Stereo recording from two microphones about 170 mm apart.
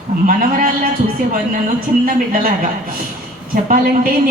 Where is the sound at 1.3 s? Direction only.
55° right (ahead or behind).